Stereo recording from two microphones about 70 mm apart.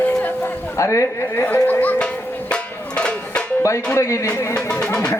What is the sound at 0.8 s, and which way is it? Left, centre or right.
Speech, left.